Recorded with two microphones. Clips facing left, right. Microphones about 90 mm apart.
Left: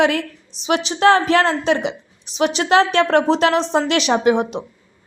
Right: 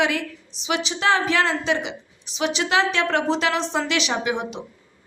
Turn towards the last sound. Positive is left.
turn(degrees=45)  # may be behind; listen again after turning